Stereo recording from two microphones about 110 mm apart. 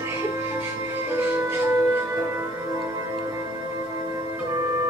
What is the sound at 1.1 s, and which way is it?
Music, 20° right (ahead or behind).